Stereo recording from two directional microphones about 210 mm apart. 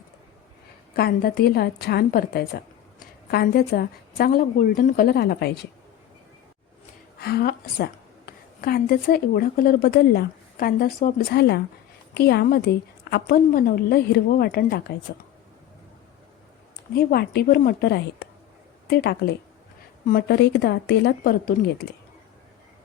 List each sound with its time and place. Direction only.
0.9 s a woman's voice: 45° left (ahead or behind)
7.2 s a woman's voice: 50° left (ahead or behind)
16.9 s a woman's voice: 45° left (ahead or behind)